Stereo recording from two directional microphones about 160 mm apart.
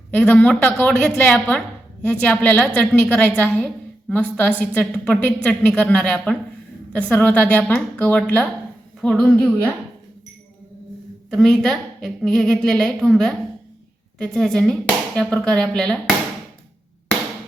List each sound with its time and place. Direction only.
0.1 s a woman's voice: 10° left (ahead or behind)
11.3 s a woman's voice: centre (ahead or behind)